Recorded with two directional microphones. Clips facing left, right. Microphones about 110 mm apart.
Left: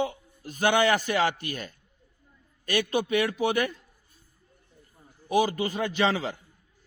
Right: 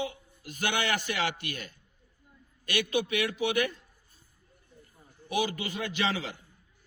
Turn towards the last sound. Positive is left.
turn(degrees=40)  # may be behind; listen again after turning